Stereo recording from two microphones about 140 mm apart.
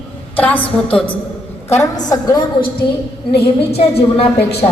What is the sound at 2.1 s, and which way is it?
Speech, 25° left (ahead or behind).